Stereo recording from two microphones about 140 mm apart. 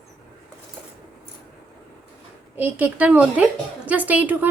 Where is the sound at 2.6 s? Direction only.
15° right (ahead or behind).